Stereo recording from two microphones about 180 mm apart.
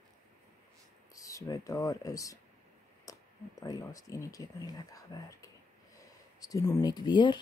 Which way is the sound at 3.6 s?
20° left (ahead or behind).